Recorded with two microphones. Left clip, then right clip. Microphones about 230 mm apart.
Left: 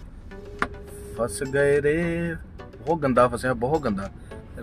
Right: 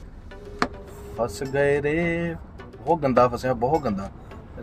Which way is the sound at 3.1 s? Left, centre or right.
Right.